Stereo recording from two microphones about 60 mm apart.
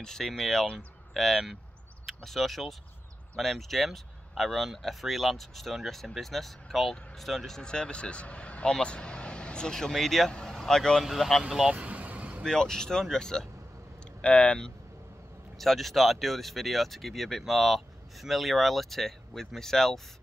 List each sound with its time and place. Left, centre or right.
0.0 s speech: centre
11.4 s speech: centre
11.7 s vehicle: right
12.4 s speech: centre
14.2 s speech: left
15.5 s speech: centre